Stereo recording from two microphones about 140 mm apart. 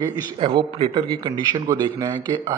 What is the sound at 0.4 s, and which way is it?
Speech, 40° right (ahead or behind).